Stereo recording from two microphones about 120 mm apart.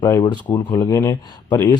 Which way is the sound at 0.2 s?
35° left (ahead or behind).